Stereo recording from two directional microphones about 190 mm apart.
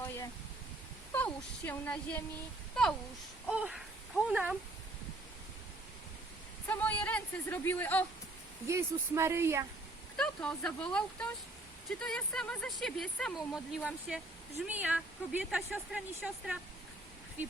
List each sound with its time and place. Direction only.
1.1 s speech: 10° left (ahead or behind)
6.7 s speech: 10° left (ahead or behind)
8.6 s speech: 15° right (ahead or behind)
10.2 s speech: 5° left (ahead or behind)